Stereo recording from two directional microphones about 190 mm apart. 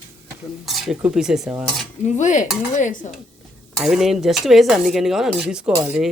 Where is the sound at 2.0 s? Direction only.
40° left (ahead or behind).